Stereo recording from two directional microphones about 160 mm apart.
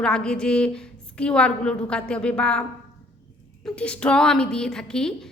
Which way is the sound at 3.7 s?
5° left (ahead or behind).